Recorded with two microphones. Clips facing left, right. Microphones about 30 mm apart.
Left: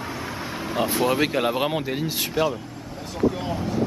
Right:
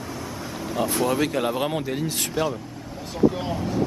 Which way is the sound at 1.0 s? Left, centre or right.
Left.